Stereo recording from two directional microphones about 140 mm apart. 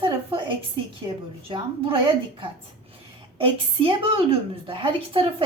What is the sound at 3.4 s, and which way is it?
A woman's voice, 40° right (ahead or behind).